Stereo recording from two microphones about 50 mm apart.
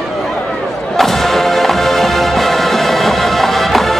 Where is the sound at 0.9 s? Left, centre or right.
Centre.